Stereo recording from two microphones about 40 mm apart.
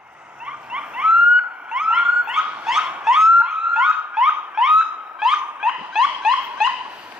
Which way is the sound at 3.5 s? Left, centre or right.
Centre.